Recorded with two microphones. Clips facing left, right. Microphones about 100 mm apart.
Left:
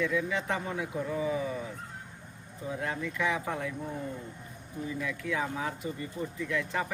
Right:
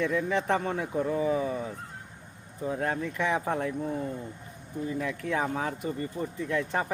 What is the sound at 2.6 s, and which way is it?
Speech, 45° right (ahead or behind).